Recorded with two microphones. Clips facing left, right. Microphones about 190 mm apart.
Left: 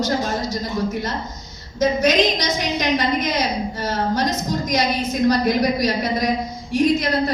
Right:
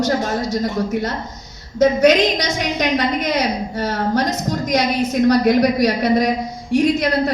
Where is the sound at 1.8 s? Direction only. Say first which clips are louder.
Right 4 dB; 65° right (ahead or behind).